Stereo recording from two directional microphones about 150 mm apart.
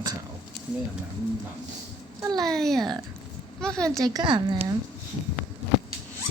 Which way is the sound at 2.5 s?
5° left (ahead or behind).